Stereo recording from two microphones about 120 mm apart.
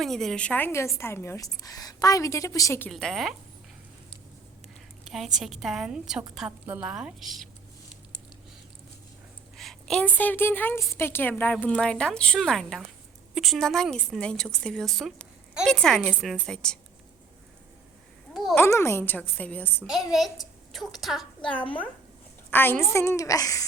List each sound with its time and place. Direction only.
0.0 s a woman's voice: 5° left (ahead or behind); by 2.9 s 20° left (ahead or behind)
2.9 s a woman's voice: centre (ahead or behind)
5.0 s a woman's voice: centre (ahead or behind)
9.6 s a sound: 5° left (ahead or behind)
10.2 s a woman's voice: 15° left (ahead or behind)
18.5 s a woman's voice: 20° left (ahead or behind)
19.8 s a woman's voice: centre (ahead or behind)
22.4 s a woman's voice: 15° left (ahead or behind)